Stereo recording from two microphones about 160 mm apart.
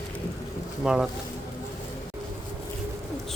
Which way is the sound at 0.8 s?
5° right (ahead or behind).